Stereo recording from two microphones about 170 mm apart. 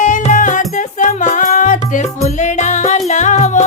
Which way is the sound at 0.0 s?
50° left (ahead or behind).